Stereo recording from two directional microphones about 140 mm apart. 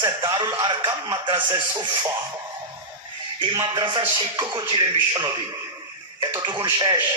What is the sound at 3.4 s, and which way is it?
A man's voice, 30° right (ahead or behind).